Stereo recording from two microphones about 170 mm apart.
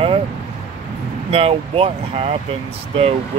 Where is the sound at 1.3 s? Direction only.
35° right (ahead or behind).